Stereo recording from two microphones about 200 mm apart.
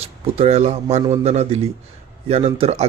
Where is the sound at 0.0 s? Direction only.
30° right (ahead or behind).